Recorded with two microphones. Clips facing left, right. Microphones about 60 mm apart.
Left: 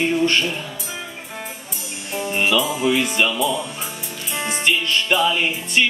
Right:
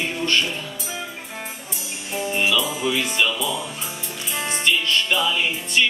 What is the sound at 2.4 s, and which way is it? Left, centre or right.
Music, centre.